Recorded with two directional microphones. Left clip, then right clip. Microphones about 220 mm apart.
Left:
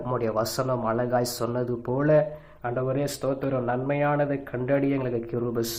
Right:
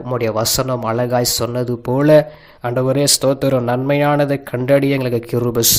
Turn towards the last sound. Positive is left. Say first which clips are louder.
# right 10 dB
turn(degrees=-45)  # may be behind; listen again after turning